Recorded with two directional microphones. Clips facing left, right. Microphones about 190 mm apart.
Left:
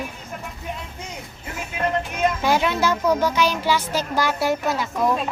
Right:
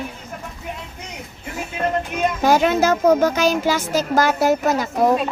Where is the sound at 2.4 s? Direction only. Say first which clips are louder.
Right 8 dB; 45° right (ahead or behind).